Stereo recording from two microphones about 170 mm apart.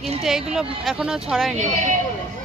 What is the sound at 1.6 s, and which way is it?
Speech, 45° right (ahead or behind).